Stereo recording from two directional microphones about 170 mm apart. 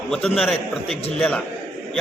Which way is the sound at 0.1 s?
Centre (ahead or behind).